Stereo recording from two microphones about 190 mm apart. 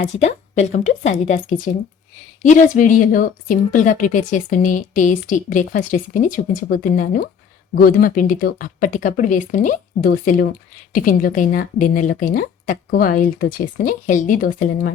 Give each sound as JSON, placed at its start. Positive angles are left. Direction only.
{"t": 0.0, "sound": "a woman's voice", "side_deg": 35}